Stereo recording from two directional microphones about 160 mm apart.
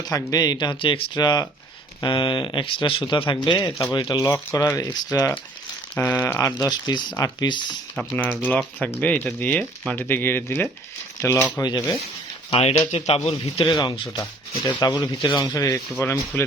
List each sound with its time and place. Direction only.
0.1 s speech: 25° left (ahead or behind)
5.9 s speech: 10° left (ahead or behind); by 7.8 s 25° left (ahead or behind)
7.9 s speech: 10° left (ahead or behind)
12.5 s a man's voice: 40° left (ahead or behind)
13.7 s a man's voice: 25° left (ahead or behind)